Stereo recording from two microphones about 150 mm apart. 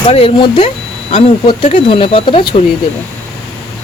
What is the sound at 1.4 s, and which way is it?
Speech, 35° left (ahead or behind).